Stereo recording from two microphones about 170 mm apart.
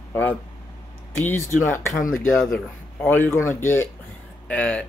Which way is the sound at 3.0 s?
10° left (ahead or behind).